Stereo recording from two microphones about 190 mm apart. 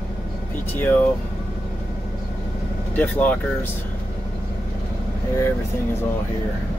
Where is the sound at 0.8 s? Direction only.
10° left (ahead or behind).